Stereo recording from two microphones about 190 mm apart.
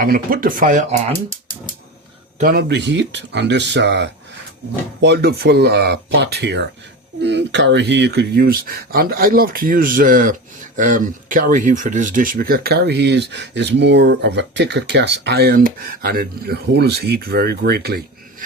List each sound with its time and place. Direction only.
0.0 s speech: 50° right (ahead or behind)
2.4 s speech: 55° right (ahead or behind)